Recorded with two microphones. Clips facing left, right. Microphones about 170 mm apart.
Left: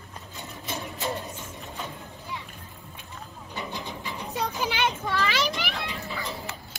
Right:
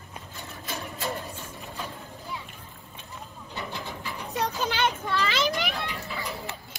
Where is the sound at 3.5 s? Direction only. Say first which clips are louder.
Left 1 dB; 15° left (ahead or behind).